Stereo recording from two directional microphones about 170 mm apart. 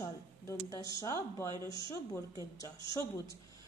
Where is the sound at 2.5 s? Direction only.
20° left (ahead or behind).